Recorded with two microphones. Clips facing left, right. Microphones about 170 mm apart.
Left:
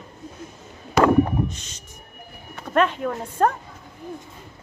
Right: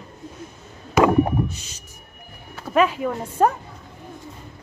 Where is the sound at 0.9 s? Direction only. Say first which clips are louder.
Even; 10° right (ahead or behind).